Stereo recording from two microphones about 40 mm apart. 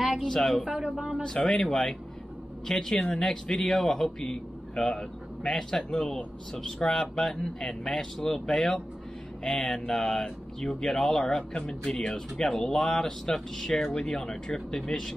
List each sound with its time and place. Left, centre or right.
0.0 s a sound: centre
0.3 s speech: centre
0.7 s speech: right
0.9 s speech: centre
1.2 s speech: centre
2.6 s speech: centre
14.0 s speech: centre